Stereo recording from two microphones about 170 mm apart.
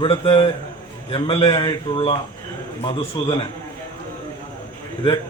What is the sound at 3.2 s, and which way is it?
Speech, 25° left (ahead or behind).